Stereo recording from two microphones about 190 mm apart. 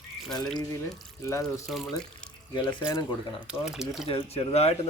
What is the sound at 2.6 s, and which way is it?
Speech, 20° left (ahead or behind).